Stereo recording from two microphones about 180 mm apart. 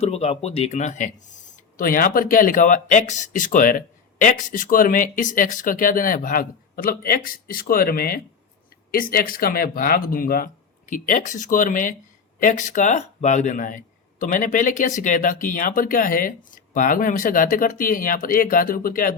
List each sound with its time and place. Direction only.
0.0 s speech: 35° left (ahead or behind); by 19.1 s 50° left (ahead or behind)